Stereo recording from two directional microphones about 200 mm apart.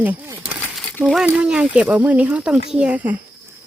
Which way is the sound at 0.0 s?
10° right (ahead or behind).